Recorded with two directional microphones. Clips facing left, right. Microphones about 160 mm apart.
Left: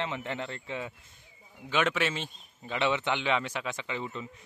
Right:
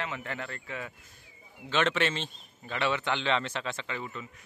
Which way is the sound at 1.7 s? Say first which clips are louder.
Right 1 dB; 10° left (ahead or behind).